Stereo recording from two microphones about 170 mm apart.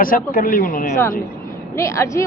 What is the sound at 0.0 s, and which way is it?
Speech, 55° left (ahead or behind).